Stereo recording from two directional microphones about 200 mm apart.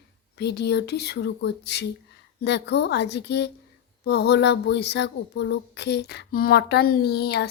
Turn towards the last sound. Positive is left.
turn(degrees=55)  # may be behind; listen again after turning